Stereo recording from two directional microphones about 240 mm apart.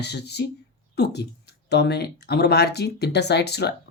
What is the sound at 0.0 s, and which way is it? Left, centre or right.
Speech, left.